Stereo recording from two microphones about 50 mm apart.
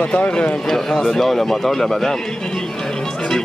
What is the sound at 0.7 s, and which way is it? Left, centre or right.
Speech, centre.